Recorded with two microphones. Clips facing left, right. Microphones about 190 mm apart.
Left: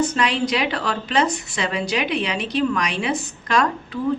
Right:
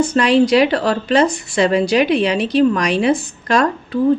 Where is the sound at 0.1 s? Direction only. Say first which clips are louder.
Right 9 dB; 35° right (ahead or behind).